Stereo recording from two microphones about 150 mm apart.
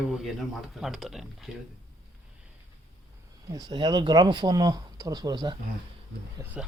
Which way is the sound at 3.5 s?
25° right (ahead or behind).